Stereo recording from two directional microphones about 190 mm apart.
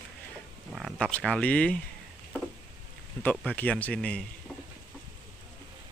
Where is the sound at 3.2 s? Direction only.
10° left (ahead or behind).